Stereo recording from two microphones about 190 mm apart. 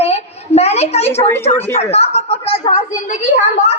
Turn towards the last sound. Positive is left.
turn(degrees=40)  # may be behind; listen again after turning